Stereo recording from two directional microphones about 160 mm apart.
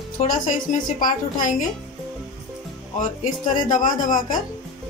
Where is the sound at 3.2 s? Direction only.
55° left (ahead or behind).